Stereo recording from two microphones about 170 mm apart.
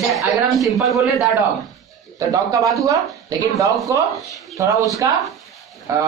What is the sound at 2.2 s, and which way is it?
A man's voice, 20° right (ahead or behind).